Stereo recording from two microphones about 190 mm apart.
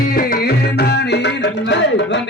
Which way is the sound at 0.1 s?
50° left (ahead or behind).